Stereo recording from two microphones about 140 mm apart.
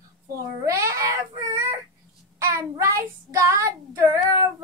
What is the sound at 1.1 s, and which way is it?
Baby cry, 20° right (ahead or behind).